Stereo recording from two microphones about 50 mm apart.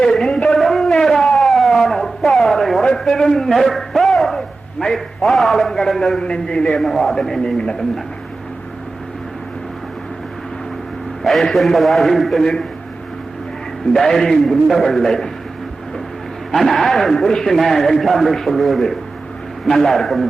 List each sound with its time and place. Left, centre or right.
0.2 s a sound: centre
0.6 s howl: centre
1.7 s a sound: centre
2.8 s a man's voice: centre
6.7 s a man's voice: centre
11.2 s a man's voice: centre
12.4 s a man's voice: centre
13.9 s a man's voice: centre
16.5 s a man's voice: centre